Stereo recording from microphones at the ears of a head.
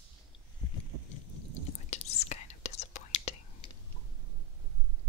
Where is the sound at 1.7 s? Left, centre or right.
Left.